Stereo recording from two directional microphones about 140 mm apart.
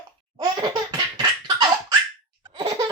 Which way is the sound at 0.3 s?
30° right (ahead or behind).